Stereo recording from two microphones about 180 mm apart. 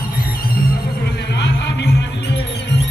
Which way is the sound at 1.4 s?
65° left (ahead or behind).